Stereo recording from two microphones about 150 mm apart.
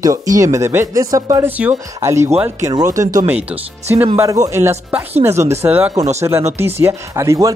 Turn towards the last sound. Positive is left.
turn(degrees=-20)  # may be behind; listen again after turning